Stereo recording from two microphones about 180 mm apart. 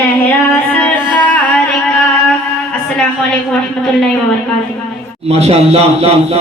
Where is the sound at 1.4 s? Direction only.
10° left (ahead or behind).